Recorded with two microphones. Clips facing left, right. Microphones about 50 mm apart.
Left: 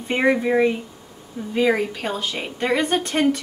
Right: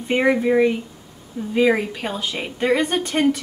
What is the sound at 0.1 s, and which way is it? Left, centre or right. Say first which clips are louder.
A woman's voice: right 1 dB; centre.